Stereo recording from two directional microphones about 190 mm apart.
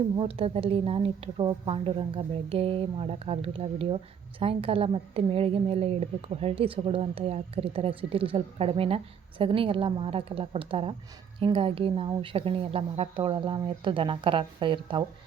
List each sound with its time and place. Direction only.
0.2 s a woman's voice: 30° right (ahead or behind)